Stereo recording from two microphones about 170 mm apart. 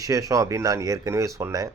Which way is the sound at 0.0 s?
20° right (ahead or behind).